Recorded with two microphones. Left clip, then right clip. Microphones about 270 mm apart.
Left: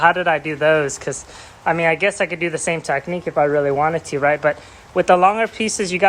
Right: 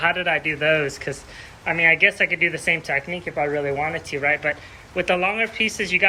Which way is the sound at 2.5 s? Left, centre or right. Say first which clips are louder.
Left 1 dB; left.